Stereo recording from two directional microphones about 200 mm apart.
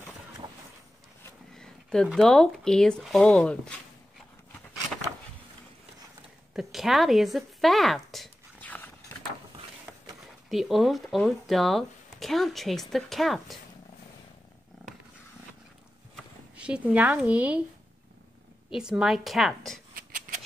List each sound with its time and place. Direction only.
1.5 s speech: 5° left (ahead or behind)
6.5 s a sound: centre (ahead or behind)
10.5 s speech: centre (ahead or behind)
16.5 s speech: 5° right (ahead or behind)
18.8 s speech: 5° right (ahead or behind)
20.0 s scissors: 40° right (ahead or behind)